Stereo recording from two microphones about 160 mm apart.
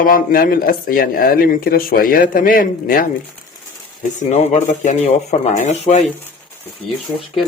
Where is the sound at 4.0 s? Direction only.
45° left (ahead or behind).